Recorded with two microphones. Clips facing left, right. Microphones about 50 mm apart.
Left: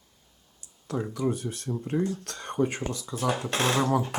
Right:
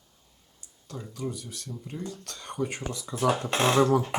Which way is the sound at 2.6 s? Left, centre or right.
Centre.